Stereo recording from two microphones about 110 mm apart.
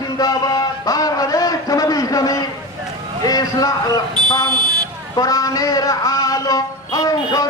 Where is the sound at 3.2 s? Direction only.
35° left (ahead or behind).